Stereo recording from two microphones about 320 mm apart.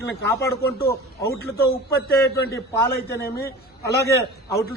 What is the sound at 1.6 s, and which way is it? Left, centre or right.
Speech, left.